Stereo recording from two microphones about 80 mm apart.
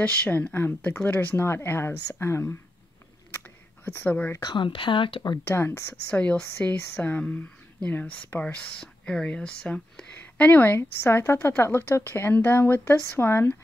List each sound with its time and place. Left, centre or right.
0.0 s a woman's voice: centre
3.8 s speech: left
4.4 s speech: left
5.4 s speech: left
6.0 s a woman's voice: centre